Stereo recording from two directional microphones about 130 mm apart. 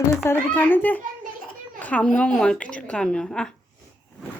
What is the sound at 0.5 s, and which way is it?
A woman's voice, 15° left (ahead or behind).